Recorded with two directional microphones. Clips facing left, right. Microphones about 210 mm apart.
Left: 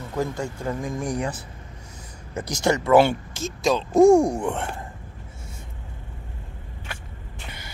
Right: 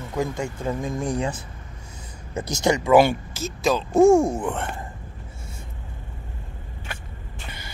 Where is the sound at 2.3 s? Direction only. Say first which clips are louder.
Right 1 dB; 25° right (ahead or behind); by 4.0 s 5° right (ahead or behind).